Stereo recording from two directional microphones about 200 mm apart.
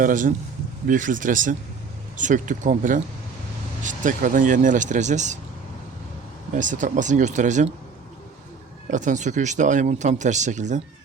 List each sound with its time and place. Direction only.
0.0 s speech: 40° right (ahead or behind)
6.5 s speech: 40° right (ahead or behind)
8.9 s speech: 40° right (ahead or behind)